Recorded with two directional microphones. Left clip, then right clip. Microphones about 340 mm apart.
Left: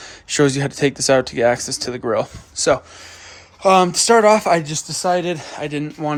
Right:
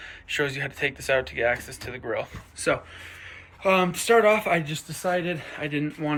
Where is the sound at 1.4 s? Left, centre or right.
Left.